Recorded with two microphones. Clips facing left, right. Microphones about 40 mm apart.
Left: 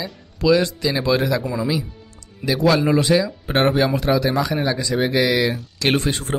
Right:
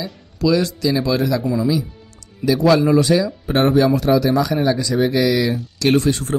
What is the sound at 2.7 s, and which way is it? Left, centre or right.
Speech, left.